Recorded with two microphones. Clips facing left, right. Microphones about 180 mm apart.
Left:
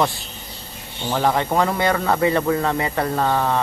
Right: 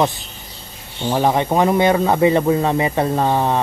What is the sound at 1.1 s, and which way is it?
Speech, 20° right (ahead or behind).